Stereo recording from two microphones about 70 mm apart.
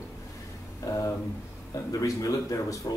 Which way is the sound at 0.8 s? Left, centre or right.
Left.